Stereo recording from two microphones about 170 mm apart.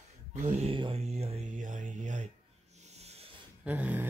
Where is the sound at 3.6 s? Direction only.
10° right (ahead or behind).